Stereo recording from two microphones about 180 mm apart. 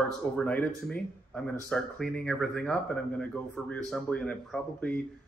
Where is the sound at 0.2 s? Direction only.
10° left (ahead or behind).